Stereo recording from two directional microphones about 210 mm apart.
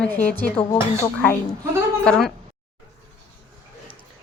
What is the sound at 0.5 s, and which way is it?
Music, 25° left (ahead or behind).